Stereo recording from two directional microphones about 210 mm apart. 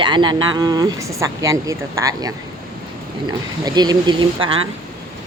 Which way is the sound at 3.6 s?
20° right (ahead or behind).